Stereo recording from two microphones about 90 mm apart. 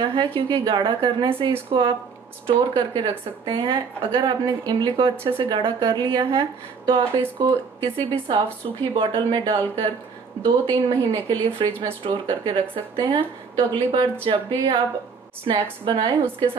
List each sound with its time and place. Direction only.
0.1 s speech: 75° right (ahead or behind)
2.4 s a woman's voice: 60° right (ahead or behind)
5.1 s speech: 25° right (ahead or behind)
5.4 s a woman's voice: 70° right (ahead or behind)
10.4 s a woman's voice: 60° right (ahead or behind)
14.2 s speech: 80° right